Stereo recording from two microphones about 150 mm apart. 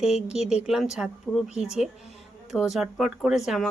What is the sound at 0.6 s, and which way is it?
Speech, centre (ahead or behind).